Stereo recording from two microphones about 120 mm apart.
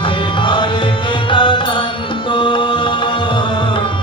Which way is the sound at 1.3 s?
40° left (ahead or behind).